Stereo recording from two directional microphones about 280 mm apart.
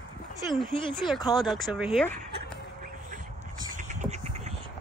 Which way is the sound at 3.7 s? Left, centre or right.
Right.